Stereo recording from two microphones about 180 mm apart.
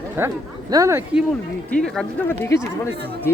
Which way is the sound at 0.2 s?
10° right (ahead or behind).